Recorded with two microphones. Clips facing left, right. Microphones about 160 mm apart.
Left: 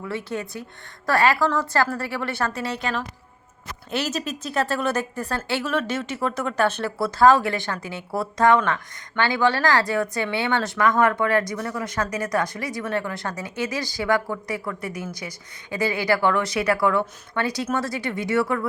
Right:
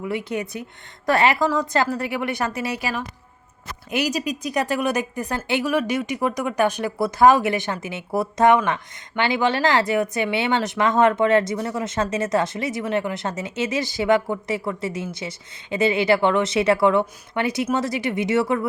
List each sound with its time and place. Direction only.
0.0 s speech: 15° right (ahead or behind)
2.7 s speech: 5° right (ahead or behind)